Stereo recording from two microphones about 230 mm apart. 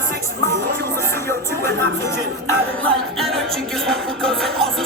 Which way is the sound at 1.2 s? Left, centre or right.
Centre.